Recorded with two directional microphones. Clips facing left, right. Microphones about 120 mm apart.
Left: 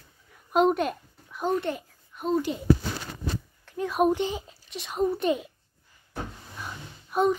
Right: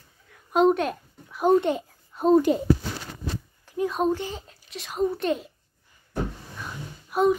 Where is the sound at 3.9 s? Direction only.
10° left (ahead or behind).